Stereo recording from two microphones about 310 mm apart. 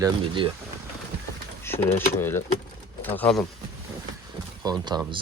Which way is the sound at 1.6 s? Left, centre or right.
Centre.